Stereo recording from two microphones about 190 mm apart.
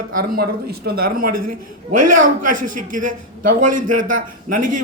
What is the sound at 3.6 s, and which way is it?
Speech, 45° right (ahead or behind).